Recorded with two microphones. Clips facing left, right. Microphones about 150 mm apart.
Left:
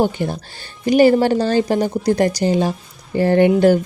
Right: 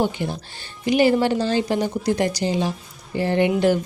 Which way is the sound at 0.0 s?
45° left (ahead or behind).